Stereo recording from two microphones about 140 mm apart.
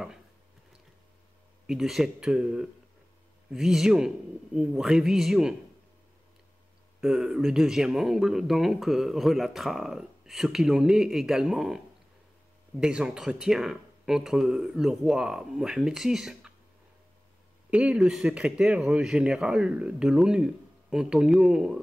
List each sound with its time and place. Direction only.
1.7 s speech: centre (ahead or behind)
7.0 s speech: 5° right (ahead or behind)
17.6 s speech: 10° right (ahead or behind)